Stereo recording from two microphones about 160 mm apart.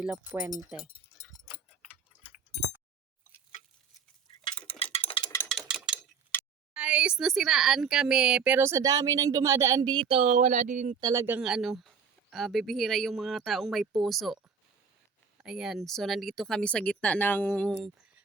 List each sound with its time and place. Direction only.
0.0 s speech: 10° right (ahead or behind)
0.8 s a sound: 30° left (ahead or behind)
4.6 s a sound: 35° left (ahead or behind)
5.5 s ratchet: centre (ahead or behind)
6.7 s speech: 5° right (ahead or behind); by 10.9 s 50° right (ahead or behind)
11.0 s speech: 20° right (ahead or behind)
11.3 s speech: 5° right (ahead or behind)
15.4 s speech: 5° right (ahead or behind)
17.7 s speech: 10° right (ahead or behind)